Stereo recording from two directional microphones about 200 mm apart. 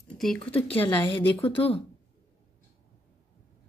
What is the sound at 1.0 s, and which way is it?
Speech, 25° left (ahead or behind).